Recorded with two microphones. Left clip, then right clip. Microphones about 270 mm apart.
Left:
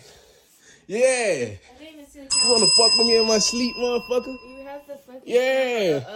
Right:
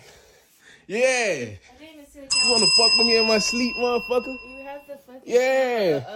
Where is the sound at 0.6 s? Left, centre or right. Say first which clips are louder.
Left 1 dB; centre.